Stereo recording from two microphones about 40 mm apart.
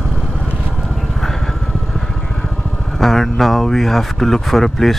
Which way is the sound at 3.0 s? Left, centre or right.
Centre.